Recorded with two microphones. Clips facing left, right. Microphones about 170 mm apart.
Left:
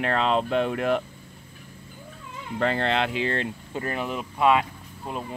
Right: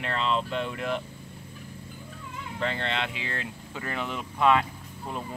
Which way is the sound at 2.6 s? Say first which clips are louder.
Left 6 dB; 45° left (ahead or behind).